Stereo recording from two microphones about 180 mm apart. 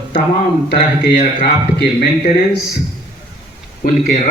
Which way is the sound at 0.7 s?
55° left (ahead or behind).